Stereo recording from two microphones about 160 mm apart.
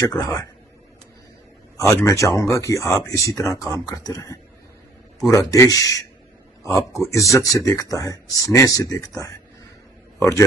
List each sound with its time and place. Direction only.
0.0 s speech: 20° left (ahead or behind)
1.8 s a man's voice: 20° left (ahead or behind)